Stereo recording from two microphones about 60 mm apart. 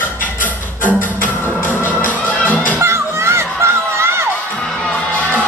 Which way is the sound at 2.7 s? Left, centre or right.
Right.